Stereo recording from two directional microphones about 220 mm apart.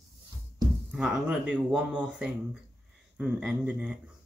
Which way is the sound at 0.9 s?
5° right (ahead or behind).